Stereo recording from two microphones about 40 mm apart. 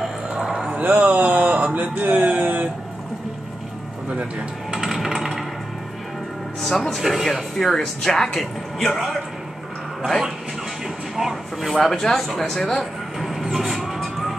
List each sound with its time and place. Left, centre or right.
0.4 s a sound: centre
0.7 s a sound: right
4.7 s a sound: centre
6.6 s speech: centre
7.0 s speech: centre
7.5 s a man's voice: centre
11.1 s vehicle: centre
11.7 s speech: centre
13.2 s vehicle: centre
13.9 s vehicle: centre